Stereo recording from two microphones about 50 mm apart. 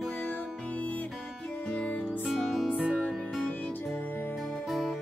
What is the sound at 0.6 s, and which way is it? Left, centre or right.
Music, left.